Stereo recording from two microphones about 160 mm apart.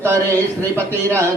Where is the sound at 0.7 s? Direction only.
15° right (ahead or behind).